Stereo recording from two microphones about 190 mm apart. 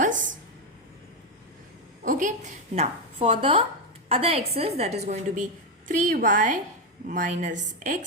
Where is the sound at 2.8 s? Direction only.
30° right (ahead or behind).